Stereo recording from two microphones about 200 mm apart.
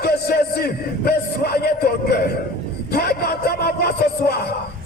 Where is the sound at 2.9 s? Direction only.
50° left (ahead or behind).